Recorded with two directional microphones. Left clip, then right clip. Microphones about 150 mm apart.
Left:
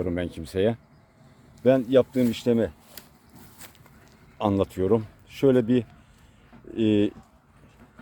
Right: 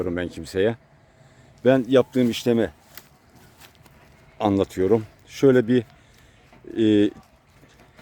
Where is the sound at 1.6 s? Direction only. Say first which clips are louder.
Right 2 dB; 70° right (ahead or behind); by 2.7 s 90° right.